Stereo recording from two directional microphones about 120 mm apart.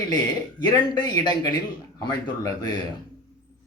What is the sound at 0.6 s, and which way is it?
Speech, 35° left (ahead or behind).